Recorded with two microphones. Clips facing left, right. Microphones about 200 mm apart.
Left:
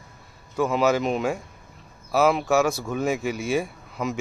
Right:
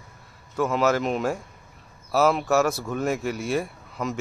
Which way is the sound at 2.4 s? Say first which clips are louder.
Left 1 dB; centre (ahead or behind).